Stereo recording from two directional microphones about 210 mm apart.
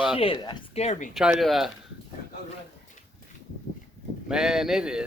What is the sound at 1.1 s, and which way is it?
Speech, centre (ahead or behind).